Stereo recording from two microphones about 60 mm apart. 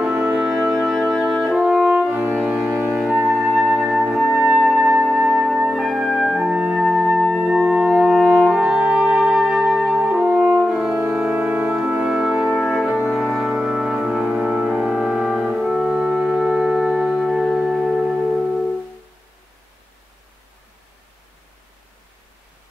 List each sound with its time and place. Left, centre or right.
0.1 s music: right
0.4 s music: centre
1.6 s french horn: centre
2.4 s music: right
3.2 s flute: centre
4.1 s music: centre
5.2 s flute: centre
6.2 s music: centre
9.5 s music: centre
9.8 s french horn: centre
11.1 s music: centre